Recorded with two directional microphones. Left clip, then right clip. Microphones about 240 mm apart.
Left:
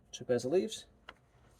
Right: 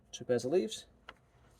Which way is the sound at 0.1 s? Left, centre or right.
Right.